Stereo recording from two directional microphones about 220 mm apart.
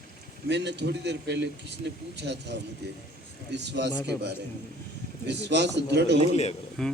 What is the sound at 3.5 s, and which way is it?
Speech, 50° right (ahead or behind).